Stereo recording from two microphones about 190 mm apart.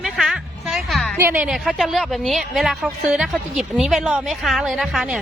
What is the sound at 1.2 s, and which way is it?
A woman's voice, 10° right (ahead or behind).